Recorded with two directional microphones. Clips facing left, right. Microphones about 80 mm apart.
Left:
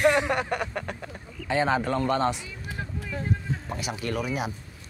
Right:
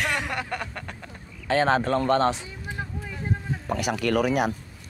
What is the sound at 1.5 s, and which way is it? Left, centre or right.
Speech, right.